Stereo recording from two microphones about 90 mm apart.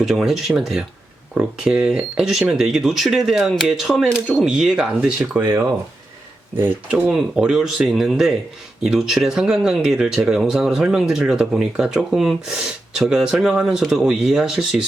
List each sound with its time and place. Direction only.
0.0 s speech: centre (ahead or behind)
5.4 s speech: 25° right (ahead or behind)
7.1 s speech: 5° right (ahead or behind)